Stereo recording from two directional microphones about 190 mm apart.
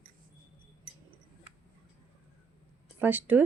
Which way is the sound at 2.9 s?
10° right (ahead or behind).